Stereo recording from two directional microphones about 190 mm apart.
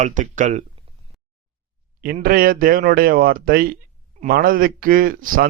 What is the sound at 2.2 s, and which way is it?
A man's voice, 50° right (ahead or behind).